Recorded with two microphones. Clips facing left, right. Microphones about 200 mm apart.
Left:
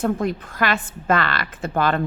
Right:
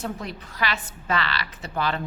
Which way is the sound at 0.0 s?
50° left (ahead or behind).